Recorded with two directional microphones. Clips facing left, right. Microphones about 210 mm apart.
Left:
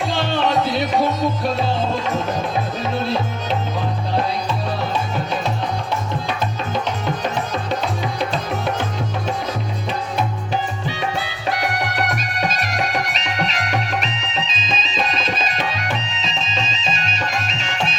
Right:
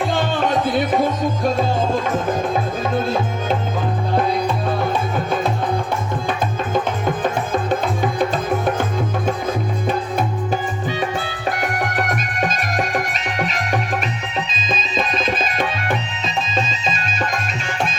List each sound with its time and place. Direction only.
0.0 s music: 50° right (ahead or behind)